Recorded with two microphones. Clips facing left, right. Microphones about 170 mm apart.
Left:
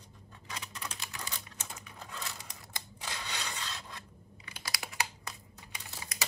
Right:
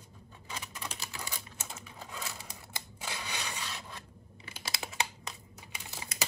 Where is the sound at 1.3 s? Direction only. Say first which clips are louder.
Right 1 dB; 5° right (ahead or behind).